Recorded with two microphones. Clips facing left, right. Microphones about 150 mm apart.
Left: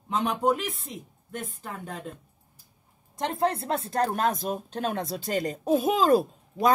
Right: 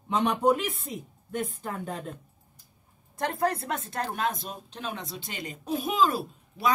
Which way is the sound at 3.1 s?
25° left (ahead or behind).